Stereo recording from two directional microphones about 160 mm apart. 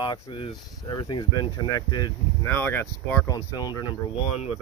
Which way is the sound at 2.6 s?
10° left (ahead or behind).